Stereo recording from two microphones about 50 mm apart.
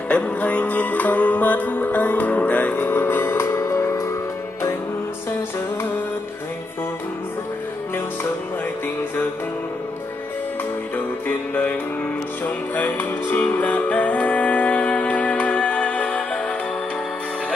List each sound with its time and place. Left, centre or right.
0.1 s music: left
2.8 s music: left
11.2 s music: left